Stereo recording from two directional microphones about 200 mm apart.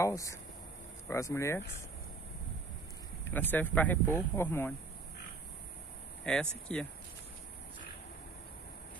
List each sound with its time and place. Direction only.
0.0 s speech: 15° left (ahead or behind)
3.3 s speech: 10° left (ahead or behind)
6.3 s speech: 5° left (ahead or behind)